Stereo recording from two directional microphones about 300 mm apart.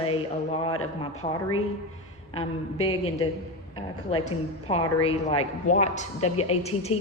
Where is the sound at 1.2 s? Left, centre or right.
Left.